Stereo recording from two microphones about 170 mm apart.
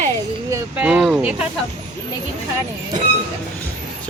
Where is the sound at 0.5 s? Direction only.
5° right (ahead or behind).